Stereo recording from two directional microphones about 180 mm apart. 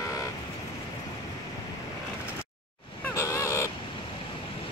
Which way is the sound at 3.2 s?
15° left (ahead or behind).